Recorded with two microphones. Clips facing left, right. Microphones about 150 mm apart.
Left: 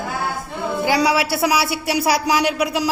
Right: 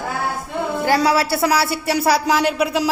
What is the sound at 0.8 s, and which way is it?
Speech, 15° left (ahead or behind).